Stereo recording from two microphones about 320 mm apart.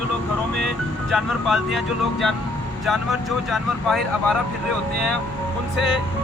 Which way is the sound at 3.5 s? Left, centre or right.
Centre.